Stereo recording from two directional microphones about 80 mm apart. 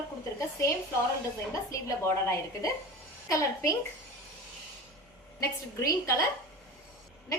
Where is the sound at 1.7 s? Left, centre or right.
Left.